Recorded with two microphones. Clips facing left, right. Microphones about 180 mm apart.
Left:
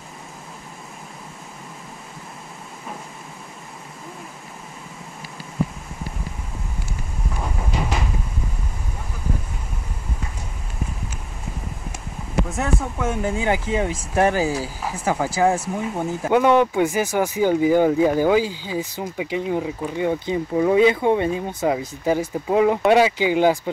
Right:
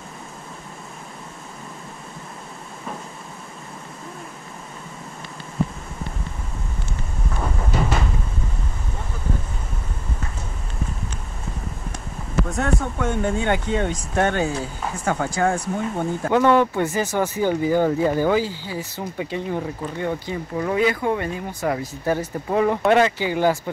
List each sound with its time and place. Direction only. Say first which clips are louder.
12.4 s speech: right 1 dB; 5° left (ahead or behind)
16.3 s speech: left 1 dB; 15° left (ahead or behind)
21.7 s speech: left 2 dB; 10° left (ahead or behind)